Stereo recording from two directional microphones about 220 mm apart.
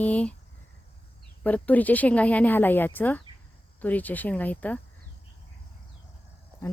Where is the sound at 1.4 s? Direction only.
5° left (ahead or behind).